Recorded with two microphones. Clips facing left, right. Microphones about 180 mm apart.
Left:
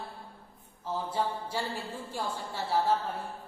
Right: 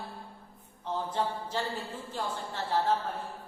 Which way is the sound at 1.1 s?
10° left (ahead or behind).